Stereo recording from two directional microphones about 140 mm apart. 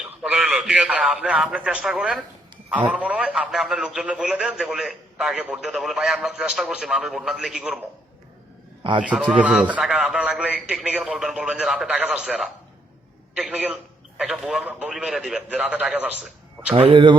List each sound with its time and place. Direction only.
0.0 s a man's voice: 5° right (ahead or behind)
9.0 s a man's voice: 5° right (ahead or behind)
16.9 s speech: 35° right (ahead or behind)